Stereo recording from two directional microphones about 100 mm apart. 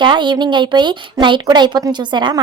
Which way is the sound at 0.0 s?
50° right (ahead or behind).